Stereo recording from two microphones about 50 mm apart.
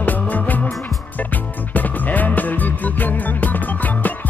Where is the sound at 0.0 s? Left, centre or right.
Left.